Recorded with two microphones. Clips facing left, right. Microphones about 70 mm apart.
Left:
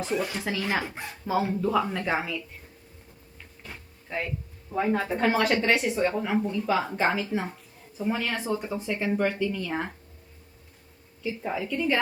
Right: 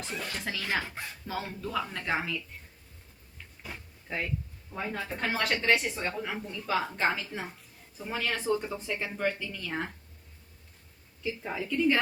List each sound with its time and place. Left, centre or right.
0.0 s speech: centre
3.6 s a sound: centre
4.7 s speech: centre
6.4 s speech: centre
11.4 s speech: centre